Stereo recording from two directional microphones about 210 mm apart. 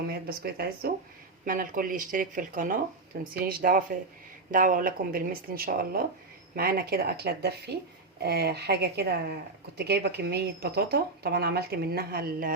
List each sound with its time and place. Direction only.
0.1 s speech: 45° right (ahead or behind)